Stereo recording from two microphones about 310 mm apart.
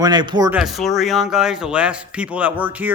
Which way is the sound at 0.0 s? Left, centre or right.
Centre.